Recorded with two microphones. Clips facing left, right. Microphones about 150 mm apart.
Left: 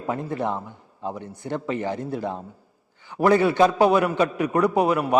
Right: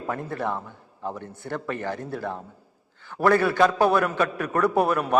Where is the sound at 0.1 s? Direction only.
20° left (ahead or behind).